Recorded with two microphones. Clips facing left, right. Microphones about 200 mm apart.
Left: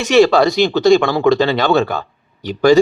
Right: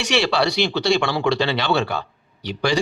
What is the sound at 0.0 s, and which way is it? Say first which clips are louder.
Speech: left 9 dB; 50° left (ahead or behind).